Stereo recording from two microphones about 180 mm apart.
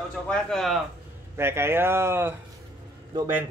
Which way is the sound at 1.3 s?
15° right (ahead or behind).